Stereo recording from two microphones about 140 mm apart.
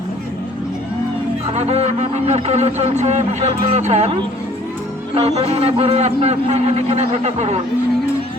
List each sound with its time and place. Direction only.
1.5 s a man's voice: 50° right (ahead or behind)